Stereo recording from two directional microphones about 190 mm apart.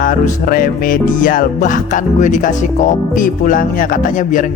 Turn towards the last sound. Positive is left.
turn(degrees=45)  # may be behind; listen again after turning